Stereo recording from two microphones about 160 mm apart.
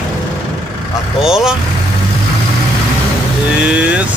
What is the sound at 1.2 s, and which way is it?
Speech, 5° right (ahead or behind).